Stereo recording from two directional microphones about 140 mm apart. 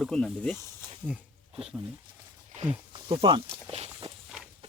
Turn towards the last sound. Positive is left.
turn(degrees=-45)  # may be behind; listen again after turning